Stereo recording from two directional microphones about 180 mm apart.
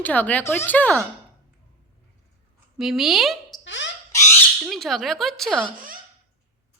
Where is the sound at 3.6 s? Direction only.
90° left.